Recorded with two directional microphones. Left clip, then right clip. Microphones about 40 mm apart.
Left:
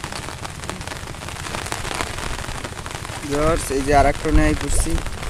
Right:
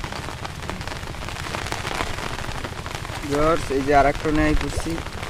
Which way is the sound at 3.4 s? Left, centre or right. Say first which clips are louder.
Left 1 dB; left.